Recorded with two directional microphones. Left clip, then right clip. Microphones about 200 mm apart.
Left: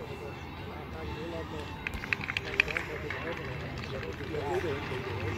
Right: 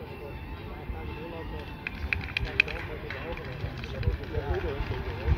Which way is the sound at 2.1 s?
5° right (ahead or behind).